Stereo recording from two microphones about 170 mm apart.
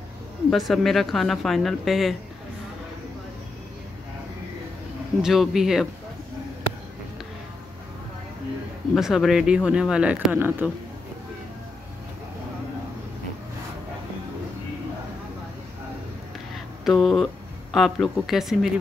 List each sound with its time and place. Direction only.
0.5 s speech: centre (ahead or behind)
5.2 s speech: centre (ahead or behind)
8.9 s speech: centre (ahead or behind)
16.8 s speech: centre (ahead or behind)